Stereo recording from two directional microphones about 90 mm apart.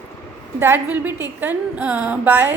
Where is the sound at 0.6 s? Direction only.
25° right (ahead or behind).